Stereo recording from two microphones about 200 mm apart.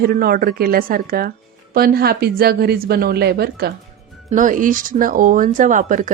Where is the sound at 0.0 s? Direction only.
50° right (ahead or behind).